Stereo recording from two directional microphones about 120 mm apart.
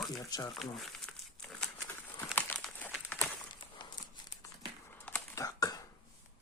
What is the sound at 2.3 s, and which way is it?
Crumpling, 15° left (ahead or behind).